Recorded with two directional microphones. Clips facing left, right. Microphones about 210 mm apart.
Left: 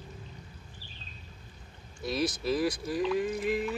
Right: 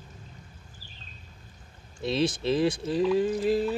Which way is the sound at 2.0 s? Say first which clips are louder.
Right 4 dB; 25° right (ahead or behind).